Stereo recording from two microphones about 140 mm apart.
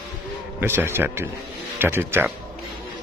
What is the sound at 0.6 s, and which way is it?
Speech, 15° right (ahead or behind).